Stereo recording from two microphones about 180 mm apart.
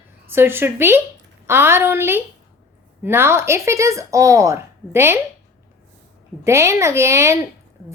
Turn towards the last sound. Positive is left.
turn(degrees=-15)  # may be behind; listen again after turning